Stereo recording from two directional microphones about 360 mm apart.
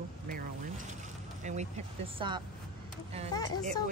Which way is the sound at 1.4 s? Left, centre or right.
Centre.